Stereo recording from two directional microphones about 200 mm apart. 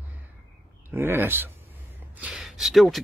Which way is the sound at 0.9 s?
10° right (ahead or behind).